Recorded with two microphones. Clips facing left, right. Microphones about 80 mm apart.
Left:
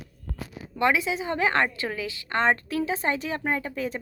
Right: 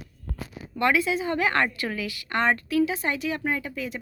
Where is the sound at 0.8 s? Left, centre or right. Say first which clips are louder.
Right 1 dB; centre.